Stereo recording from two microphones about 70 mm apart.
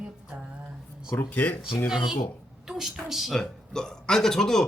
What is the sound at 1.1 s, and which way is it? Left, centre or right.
Speech, left.